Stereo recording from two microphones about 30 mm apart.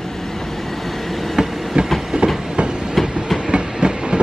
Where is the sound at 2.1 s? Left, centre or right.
Right.